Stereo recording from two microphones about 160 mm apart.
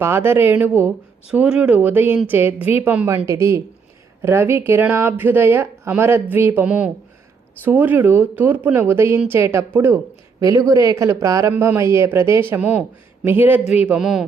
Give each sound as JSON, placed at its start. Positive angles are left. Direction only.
{"t": 0.0, "sound": "speech", "side_deg": -15}